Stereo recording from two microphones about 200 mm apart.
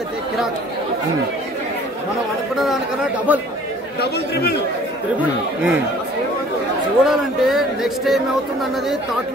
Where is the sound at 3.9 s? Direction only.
55° left (ahead or behind).